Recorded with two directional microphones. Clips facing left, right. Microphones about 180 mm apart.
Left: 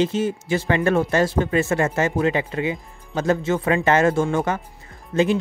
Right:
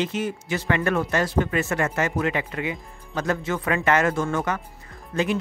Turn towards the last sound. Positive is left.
turn(degrees=25)  # may be behind; listen again after turning